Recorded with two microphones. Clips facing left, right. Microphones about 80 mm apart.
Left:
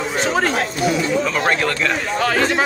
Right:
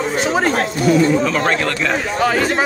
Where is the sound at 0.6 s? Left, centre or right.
Right.